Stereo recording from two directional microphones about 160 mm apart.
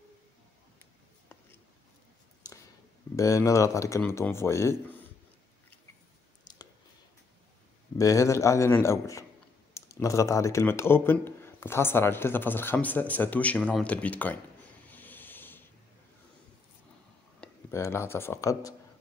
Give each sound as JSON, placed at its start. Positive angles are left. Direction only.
{"t": 3.2, "sound": "speech", "side_deg": 20}
{"t": 6.5, "sound": "clicking", "side_deg": 25}
{"t": 8.0, "sound": "a man's voice", "side_deg": 20}
{"t": 14.9, "sound": "a sound", "side_deg": 10}
{"t": 17.4, "sound": "speech", "side_deg": 15}